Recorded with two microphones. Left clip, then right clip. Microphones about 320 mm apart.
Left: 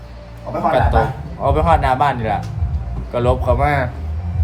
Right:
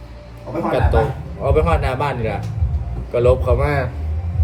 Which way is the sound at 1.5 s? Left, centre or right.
Centre.